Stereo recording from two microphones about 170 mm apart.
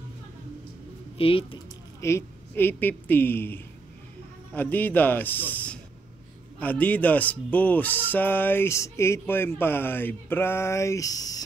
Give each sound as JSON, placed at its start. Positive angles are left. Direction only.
{"t": 1.1, "sound": "speech", "side_deg": 35}
{"t": 2.0, "sound": "a woman's voice", "side_deg": 15}